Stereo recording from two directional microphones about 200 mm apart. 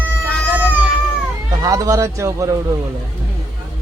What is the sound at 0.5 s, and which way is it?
Music, 10° right (ahead or behind).